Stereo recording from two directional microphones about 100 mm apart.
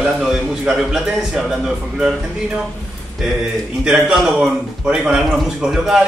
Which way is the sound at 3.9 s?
5° right (ahead or behind).